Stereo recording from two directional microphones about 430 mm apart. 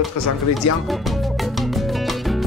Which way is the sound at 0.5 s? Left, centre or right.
Centre.